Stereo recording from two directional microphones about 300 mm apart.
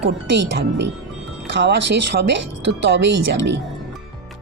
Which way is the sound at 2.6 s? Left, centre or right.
Right.